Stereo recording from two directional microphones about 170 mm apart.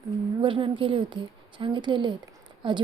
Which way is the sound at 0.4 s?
30° right (ahead or behind).